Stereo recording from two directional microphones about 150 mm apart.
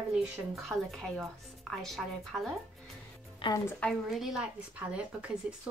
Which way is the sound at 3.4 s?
35° left (ahead or behind).